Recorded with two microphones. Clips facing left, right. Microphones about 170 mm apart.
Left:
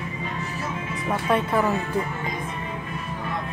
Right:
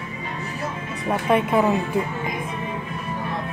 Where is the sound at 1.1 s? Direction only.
20° right (ahead or behind).